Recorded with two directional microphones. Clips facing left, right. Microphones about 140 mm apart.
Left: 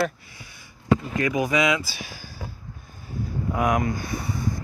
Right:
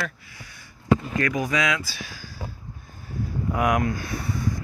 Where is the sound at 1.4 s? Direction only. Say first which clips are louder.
Left 6 dB; 5° left (ahead or behind).